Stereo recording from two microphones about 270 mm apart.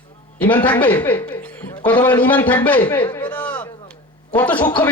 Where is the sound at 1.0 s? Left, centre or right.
Centre.